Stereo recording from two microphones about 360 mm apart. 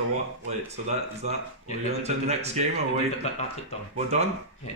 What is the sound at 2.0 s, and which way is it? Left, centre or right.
Speech, centre.